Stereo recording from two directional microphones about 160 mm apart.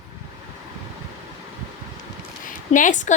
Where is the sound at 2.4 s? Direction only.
55° left (ahead or behind).